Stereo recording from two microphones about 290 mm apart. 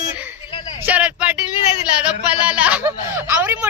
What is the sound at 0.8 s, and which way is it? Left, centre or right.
A woman's voice, centre.